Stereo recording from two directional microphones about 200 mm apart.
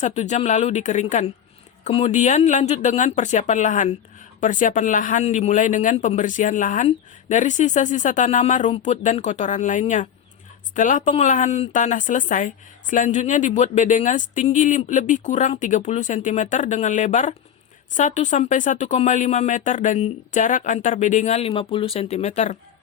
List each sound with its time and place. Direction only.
0.0 s a woman's voice: 35° left (ahead or behind)